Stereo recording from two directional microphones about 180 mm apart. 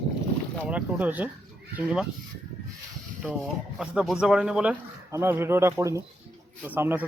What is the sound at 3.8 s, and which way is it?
A man's voice, 5° right (ahead or behind).